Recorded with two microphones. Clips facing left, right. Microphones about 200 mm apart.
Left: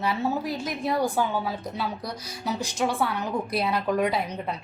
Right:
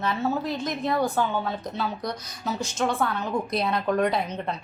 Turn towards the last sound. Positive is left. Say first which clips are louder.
# right 1 dB
turn(degrees=5)  # may be behind; listen again after turning